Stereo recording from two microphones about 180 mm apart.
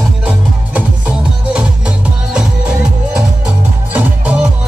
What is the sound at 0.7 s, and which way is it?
Music, 5° right (ahead or behind).